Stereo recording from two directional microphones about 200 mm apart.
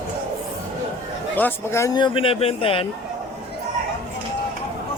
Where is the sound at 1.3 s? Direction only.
10° left (ahead or behind); by 2.9 s 25° left (ahead or behind).